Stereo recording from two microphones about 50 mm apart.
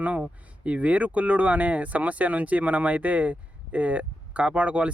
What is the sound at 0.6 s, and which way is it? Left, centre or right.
Speech, right.